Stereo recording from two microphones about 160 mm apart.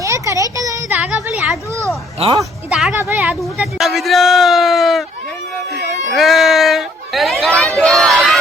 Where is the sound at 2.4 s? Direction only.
5° right (ahead or behind).